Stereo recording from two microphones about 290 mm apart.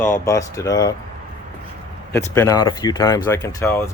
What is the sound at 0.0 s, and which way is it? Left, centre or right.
Speech, centre.